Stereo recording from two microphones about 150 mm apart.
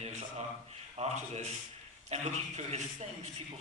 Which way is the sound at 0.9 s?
50° right (ahead or behind).